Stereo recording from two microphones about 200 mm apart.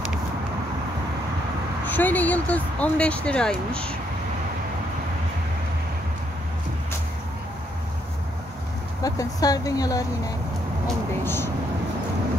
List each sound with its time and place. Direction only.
1.9 s speech: 10° left (ahead or behind)
9.0 s speech: 20° left (ahead or behind)
11.2 s speech: 10° left (ahead or behind)